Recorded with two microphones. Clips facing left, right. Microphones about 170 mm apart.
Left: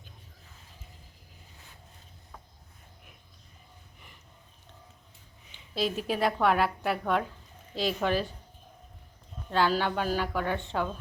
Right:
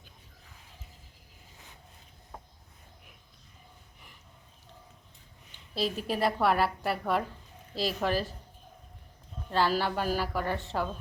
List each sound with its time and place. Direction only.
5.7 s a woman's voice: centre (ahead or behind)
9.5 s a woman's voice: centre (ahead or behind)